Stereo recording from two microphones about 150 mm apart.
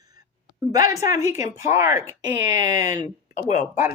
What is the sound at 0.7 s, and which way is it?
Speech, 25° right (ahead or behind).